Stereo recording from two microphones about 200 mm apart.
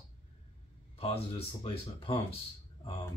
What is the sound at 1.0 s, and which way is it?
Speech, 30° left (ahead or behind).